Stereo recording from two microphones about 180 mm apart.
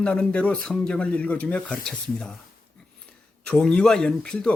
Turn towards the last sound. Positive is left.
turn(degrees=5)  # may be behind; listen again after turning